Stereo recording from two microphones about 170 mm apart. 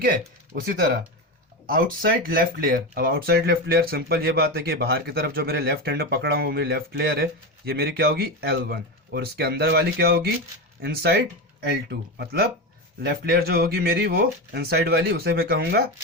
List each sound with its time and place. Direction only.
0.0 s speech: 55° right (ahead or behind); by 15.9 s 75° right (ahead or behind)